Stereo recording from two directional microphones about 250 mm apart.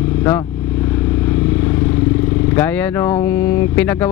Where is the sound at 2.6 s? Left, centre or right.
Centre.